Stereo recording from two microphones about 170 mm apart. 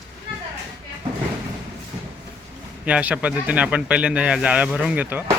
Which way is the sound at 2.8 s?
10° right (ahead or behind).